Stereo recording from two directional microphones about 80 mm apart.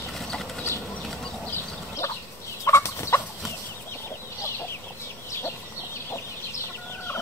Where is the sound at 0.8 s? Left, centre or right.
Centre.